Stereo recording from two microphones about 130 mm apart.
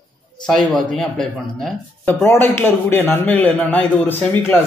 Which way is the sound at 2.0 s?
15° left (ahead or behind).